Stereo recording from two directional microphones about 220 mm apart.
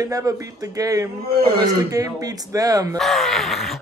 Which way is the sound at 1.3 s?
45° right (ahead or behind).